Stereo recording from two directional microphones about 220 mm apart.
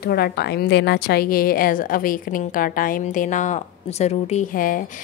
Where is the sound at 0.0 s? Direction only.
45° left (ahead or behind).